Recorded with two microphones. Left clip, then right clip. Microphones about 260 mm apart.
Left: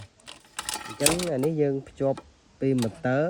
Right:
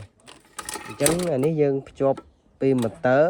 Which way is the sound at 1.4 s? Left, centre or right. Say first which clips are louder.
Right 4 dB; right.